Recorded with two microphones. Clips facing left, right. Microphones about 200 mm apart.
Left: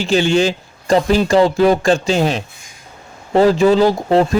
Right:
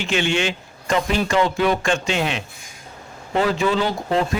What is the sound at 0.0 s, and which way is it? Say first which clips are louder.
Speech: left 7 dB; 35° left (ahead or behind).